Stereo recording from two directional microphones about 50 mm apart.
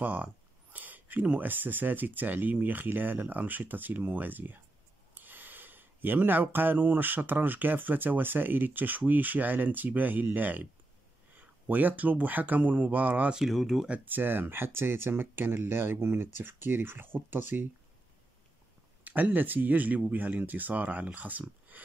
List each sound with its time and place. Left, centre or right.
0.0 s speech: right
13.5 s speech: centre
14.0 s speech: right
19.0 s speech: right